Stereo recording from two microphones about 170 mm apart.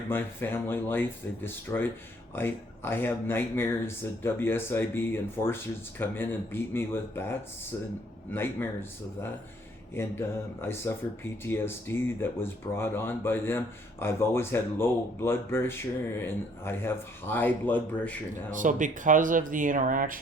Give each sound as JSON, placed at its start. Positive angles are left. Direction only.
{"t": 0.1, "sound": "speech", "side_deg": 10}
{"t": 9.9, "sound": "speech", "side_deg": 15}
{"t": 18.5, "sound": "speech", "side_deg": -50}